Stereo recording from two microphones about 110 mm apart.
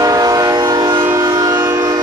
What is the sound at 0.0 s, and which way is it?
Train, 35° right (ahead or behind).